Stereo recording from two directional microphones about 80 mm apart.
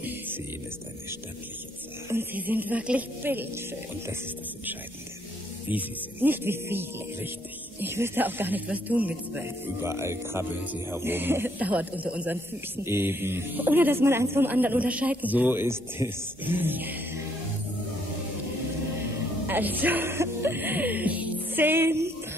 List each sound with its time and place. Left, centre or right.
2.0 s speech: right
5.7 s speech: right
9.8 s music: right
10.6 s speech: right
12.8 s speech: right
19.4 s speech: right